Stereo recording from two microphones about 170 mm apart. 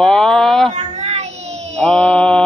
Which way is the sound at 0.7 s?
40° right (ahead or behind).